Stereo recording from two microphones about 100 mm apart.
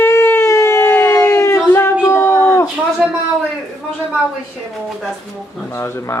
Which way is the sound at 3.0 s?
Centre (ahead or behind).